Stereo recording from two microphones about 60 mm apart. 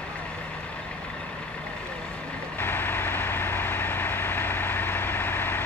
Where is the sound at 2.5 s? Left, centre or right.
Left.